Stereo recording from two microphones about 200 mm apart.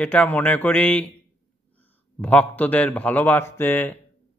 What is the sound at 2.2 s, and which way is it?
Speech, 10° left (ahead or behind).